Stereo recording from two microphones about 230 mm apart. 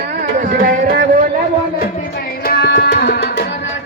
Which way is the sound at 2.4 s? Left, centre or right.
Left.